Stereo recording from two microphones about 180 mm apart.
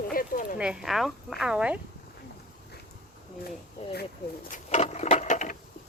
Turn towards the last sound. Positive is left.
turn(degrees=45)  # may be behind; listen again after turning